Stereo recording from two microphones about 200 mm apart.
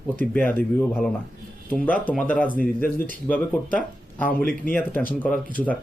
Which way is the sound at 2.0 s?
5° left (ahead or behind).